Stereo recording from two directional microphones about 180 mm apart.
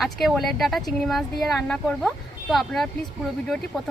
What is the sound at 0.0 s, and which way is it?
Speech, centre (ahead or behind).